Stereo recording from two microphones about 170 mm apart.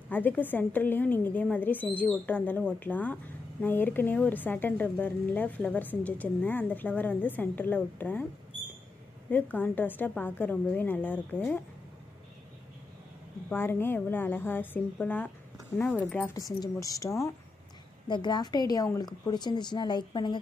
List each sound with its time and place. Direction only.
0.1 s speech: 10° left (ahead or behind)
9.3 s speech: 10° left (ahead or behind)
13.5 s speech: 15° left (ahead or behind)
16.3 s speech: 20° left (ahead or behind)